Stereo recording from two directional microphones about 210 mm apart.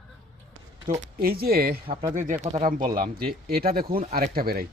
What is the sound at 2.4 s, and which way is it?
Speech, 35° right (ahead or behind).